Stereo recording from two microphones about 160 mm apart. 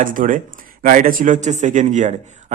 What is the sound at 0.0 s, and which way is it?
A man's voice, 60° right (ahead or behind).